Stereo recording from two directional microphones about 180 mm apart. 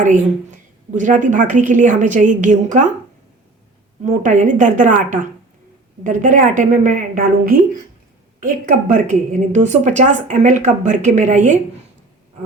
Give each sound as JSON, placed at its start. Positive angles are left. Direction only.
{"t": 0.0, "sound": "a woman's voice", "side_deg": -45}
{"t": 4.0, "sound": "a woman's voice", "side_deg": -45}